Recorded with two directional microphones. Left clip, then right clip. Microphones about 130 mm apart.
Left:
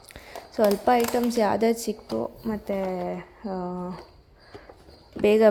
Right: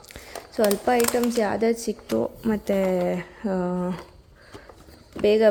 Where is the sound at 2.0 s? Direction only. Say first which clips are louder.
Right 8 dB; 30° right (ahead or behind).